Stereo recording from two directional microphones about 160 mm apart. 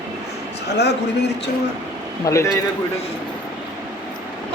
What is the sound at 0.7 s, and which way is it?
Speech, 90° left.